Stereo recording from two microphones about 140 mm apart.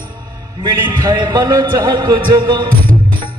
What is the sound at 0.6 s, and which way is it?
A man's voice, 30° right (ahead or behind).